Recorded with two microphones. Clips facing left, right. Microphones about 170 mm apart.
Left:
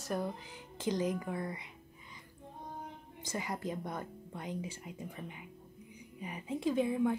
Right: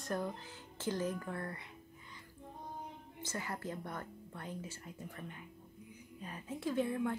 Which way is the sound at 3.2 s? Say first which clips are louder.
Left 4 dB; 15° left (ahead or behind).